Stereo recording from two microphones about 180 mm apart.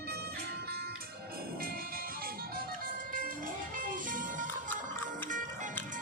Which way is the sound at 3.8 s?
50° right (ahead or behind).